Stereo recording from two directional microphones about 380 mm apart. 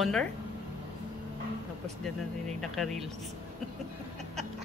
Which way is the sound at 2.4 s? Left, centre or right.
Centre.